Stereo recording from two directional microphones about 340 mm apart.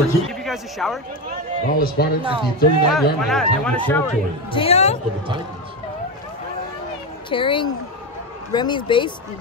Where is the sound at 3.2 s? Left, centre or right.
Centre.